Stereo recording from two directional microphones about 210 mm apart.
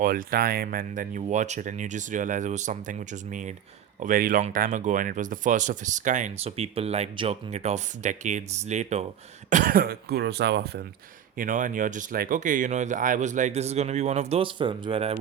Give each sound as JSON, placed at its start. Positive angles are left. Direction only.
{"t": 0.0, "sound": "speech", "side_deg": -40}
{"t": 11.3, "sound": "speech", "side_deg": -40}